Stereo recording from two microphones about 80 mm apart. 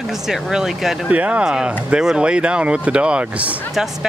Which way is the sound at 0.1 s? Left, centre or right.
Centre.